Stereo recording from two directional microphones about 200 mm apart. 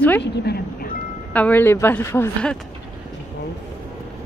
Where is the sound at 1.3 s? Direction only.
10° left (ahead or behind).